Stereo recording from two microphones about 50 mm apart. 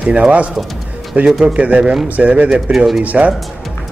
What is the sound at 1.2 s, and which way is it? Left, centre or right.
Speech, centre.